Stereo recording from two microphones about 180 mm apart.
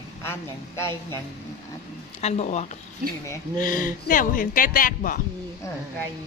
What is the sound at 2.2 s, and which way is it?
Speech, 40° left (ahead or behind).